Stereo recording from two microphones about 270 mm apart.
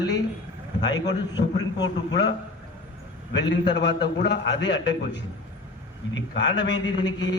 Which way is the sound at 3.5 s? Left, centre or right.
Left.